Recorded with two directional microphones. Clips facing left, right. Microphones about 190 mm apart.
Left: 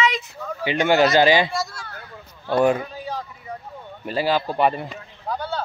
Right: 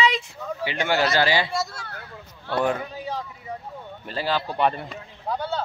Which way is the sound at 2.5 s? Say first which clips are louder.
Left 5 dB; 15° left (ahead or behind).